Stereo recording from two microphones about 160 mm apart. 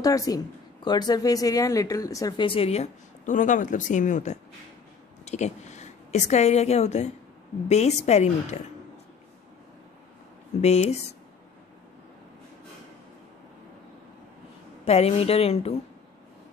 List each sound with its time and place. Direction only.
0.0 s a woman's voice: 20° left (ahead or behind); by 8.5 s 45° left (ahead or behind)
10.6 s a woman's voice: 45° left (ahead or behind)
14.9 s a woman's voice: 40° left (ahead or behind)